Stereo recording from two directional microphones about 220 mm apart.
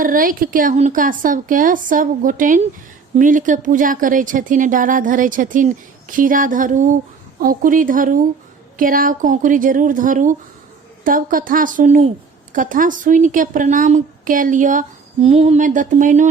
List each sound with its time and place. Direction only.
0.0 s a woman's voice: 40° right (ahead or behind)